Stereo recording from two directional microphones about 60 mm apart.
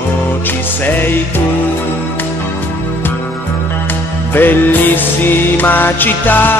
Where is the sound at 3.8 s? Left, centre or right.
Left.